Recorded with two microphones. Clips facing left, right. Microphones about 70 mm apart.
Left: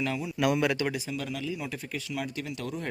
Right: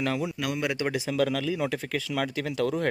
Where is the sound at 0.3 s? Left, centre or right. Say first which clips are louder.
Left 5 dB; centre.